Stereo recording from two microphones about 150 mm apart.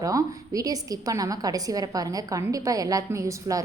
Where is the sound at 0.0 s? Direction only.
25° right (ahead or behind).